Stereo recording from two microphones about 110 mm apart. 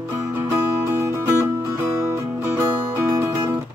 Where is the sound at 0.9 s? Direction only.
20° right (ahead or behind).